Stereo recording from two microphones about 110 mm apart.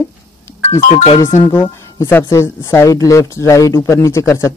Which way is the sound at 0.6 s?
75° left (ahead or behind).